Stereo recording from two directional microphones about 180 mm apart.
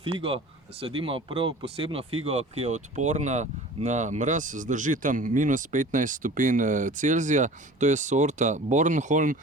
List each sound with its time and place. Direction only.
0.0 s speech: 30° right (ahead or behind)